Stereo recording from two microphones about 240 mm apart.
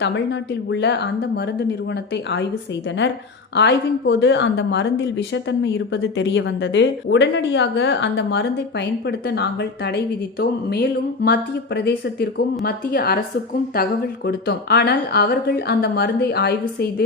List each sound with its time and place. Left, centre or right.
0.7 s speech: left
3.5 s speech: left